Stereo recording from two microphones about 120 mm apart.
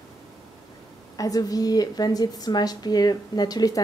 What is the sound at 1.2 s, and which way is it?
A woman's voice, 30° left (ahead or behind).